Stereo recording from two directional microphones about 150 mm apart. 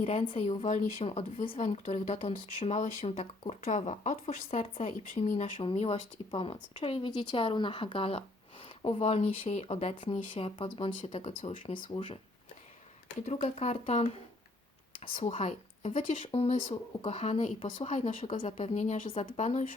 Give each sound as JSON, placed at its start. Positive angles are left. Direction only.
{"t": 0.0, "sound": "speech", "side_deg": 40}
{"t": 3.6, "sound": "speech", "side_deg": 55}
{"t": 5.4, "sound": "speech", "side_deg": 35}
{"t": 13.2, "sound": "speech", "side_deg": 45}
{"t": 15.2, "sound": "speech", "side_deg": 45}